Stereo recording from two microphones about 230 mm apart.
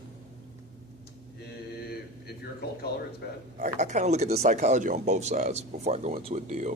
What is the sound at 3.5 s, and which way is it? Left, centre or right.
Speech, right.